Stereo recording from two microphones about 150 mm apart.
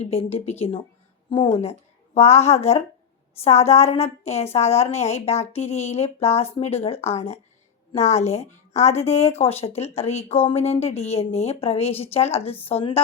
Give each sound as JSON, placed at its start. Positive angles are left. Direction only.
{"t": 0.0, "sound": "a woman's voice", "side_deg": 40}
{"t": 2.1, "sound": "a woman's voice", "side_deg": 45}